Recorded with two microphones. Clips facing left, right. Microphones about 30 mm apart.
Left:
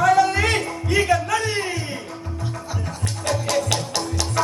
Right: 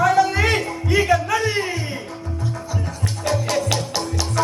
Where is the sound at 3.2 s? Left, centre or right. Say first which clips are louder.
Right 1 dB; centre.